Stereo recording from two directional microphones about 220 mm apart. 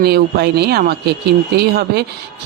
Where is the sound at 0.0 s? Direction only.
45° right (ahead or behind).